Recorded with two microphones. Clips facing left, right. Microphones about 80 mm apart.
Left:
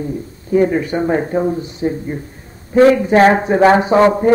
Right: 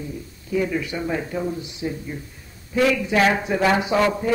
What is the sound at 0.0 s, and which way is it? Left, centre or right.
A man's voice, left.